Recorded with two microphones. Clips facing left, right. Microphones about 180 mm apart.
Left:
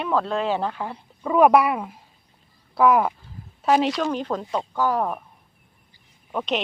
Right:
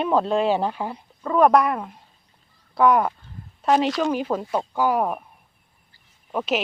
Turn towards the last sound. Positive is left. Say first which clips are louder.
# right 1 dB
turn(degrees=-5)  # may be behind; listen again after turning